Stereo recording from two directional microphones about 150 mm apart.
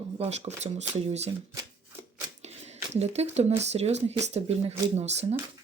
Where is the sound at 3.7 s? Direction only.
45° right (ahead or behind).